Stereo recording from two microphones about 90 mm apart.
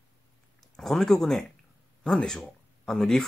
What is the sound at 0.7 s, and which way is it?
Speech, 5° left (ahead or behind).